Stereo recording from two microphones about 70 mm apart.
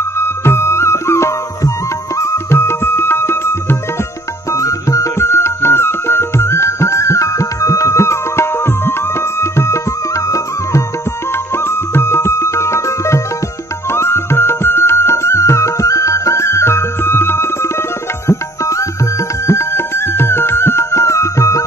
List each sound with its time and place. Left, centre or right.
0.2 s music: left
4.5 s music: left
11.5 s music: left